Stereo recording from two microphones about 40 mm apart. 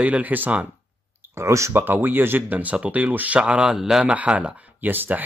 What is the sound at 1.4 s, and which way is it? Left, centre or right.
Speech, right.